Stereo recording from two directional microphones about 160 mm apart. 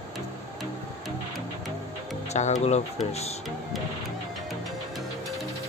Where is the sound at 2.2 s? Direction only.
45° left (ahead or behind).